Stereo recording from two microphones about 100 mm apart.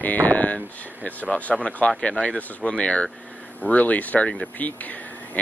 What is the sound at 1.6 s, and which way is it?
Speech, 15° left (ahead or behind).